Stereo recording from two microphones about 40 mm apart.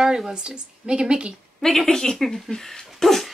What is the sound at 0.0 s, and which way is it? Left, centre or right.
Speech, centre.